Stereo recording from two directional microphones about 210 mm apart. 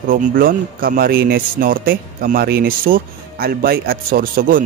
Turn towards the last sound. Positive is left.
turn(degrees=-40)  # may be behind; listen again after turning